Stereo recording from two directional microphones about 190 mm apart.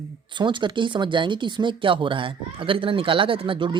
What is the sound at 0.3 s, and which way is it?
Speech, 25° right (ahead or behind).